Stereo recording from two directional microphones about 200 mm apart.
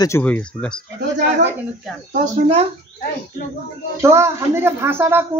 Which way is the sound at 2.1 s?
30° right (ahead or behind).